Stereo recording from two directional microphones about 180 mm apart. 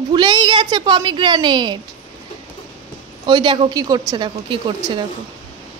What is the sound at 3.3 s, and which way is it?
Speech, 25° right (ahead or behind).